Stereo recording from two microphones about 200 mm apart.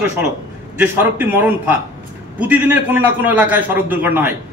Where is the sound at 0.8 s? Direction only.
10° right (ahead or behind).